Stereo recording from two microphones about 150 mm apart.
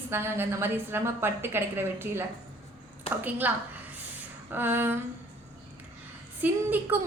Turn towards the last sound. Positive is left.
turn(degrees=-15)  # may be behind; listen again after turning